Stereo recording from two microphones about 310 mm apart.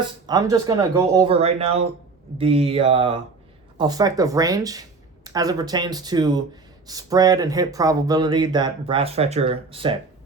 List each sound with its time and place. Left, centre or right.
0.3 s speech: centre